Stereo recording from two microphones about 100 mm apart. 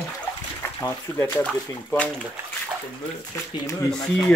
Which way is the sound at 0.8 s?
20° left (ahead or behind).